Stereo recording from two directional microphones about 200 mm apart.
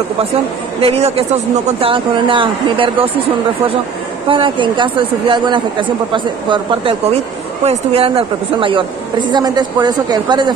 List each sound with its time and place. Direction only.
0.7 s a woman's voice: 30° right (ahead or behind)
4.3 s a woman's voice: 25° right (ahead or behind)